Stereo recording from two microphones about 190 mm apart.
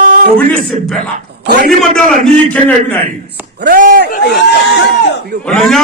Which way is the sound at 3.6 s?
50° right (ahead or behind).